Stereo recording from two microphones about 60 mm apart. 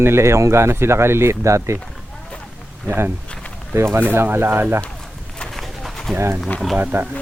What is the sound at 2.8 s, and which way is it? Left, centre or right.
Speech, right.